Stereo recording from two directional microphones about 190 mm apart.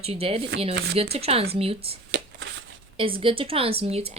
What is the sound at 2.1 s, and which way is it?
Shuffling cards, 70° right (ahead or behind).